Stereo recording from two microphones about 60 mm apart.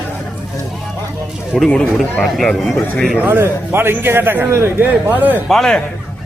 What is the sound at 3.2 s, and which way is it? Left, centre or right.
A man's voice, right.